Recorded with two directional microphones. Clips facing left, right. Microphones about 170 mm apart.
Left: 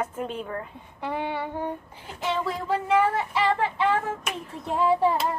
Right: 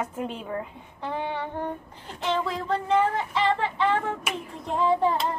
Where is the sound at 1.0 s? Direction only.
15° left (ahead or behind).